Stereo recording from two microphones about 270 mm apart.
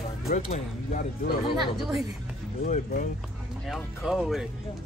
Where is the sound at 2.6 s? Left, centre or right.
Left.